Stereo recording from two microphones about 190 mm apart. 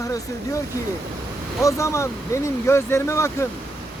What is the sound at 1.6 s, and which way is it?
Speech, 15° left (ahead or behind).